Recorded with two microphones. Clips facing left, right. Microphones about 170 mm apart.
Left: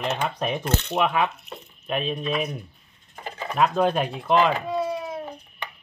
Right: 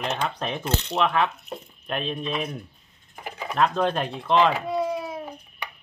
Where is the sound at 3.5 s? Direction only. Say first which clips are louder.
Left 2 dB; 5° left (ahead or behind).